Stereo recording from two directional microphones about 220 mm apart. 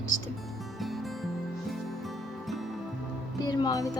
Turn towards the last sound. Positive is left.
turn(degrees=15)  # may be behind; listen again after turning